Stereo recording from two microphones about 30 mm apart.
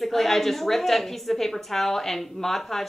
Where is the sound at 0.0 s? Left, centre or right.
Centre.